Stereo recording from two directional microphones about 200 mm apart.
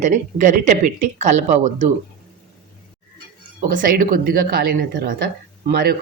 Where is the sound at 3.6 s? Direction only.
40° right (ahead or behind).